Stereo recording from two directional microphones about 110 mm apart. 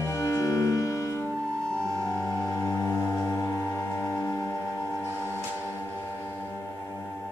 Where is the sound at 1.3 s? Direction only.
5° left (ahead or behind).